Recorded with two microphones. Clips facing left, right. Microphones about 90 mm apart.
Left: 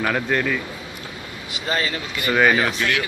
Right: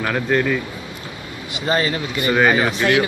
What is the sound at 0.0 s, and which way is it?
Speech, centre (ahead or behind).